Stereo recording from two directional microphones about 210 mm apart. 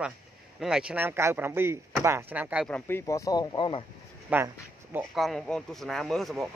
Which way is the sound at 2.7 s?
10° left (ahead or behind).